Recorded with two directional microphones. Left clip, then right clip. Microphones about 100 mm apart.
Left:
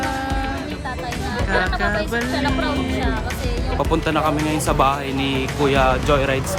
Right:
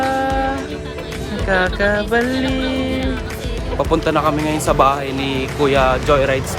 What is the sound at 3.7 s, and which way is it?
Speech, 20° left (ahead or behind).